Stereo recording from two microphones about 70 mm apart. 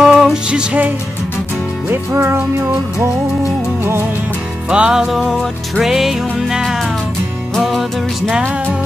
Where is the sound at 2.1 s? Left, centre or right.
Right.